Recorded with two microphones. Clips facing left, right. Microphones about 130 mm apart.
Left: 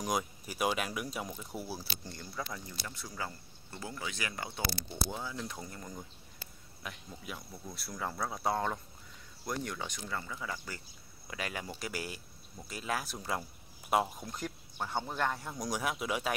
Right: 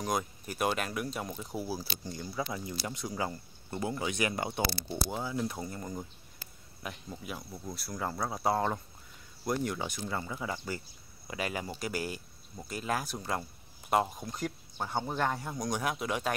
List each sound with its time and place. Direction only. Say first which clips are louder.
0.2 s a man's voice: right 1 dB; 5° left (ahead or behind)
1.3 s speech: right 4 dB; 10° right (ahead or behind); by 4.8 s 25° right (ahead or behind)
5.1 s a man's voice: right 6 dB; 15° right (ahead or behind)
9.9 s speech: right 4 dB; 25° right (ahead or behind)
11.2 s a man's voice: right 4 dB; 5° right (ahead or behind)